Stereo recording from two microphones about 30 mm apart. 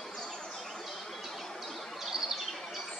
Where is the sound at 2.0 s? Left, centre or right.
Centre.